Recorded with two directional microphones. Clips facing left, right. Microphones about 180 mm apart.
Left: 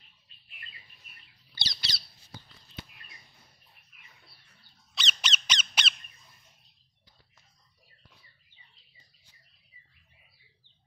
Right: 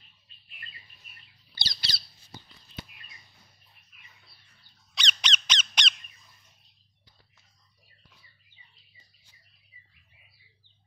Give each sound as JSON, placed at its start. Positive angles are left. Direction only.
{"t": 1.5, "sound": "squawk", "side_deg": -35}
{"t": 4.9, "sound": "squeak", "side_deg": 5}